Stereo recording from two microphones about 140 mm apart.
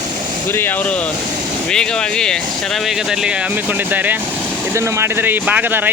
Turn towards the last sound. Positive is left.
turn(degrees=-15)  # may be behind; listen again after turning